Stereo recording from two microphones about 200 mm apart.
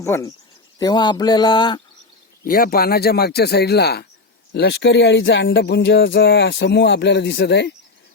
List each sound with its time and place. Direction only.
0.0 s speech: 15° left (ahead or behind)
2.4 s a man's voice: 45° left (ahead or behind)